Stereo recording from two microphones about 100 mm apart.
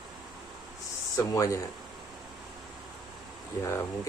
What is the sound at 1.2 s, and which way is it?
Speech, 30° left (ahead or behind).